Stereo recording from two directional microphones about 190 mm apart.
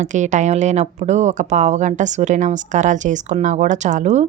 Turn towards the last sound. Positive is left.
turn(degrees=-35)  # may be behind; listen again after turning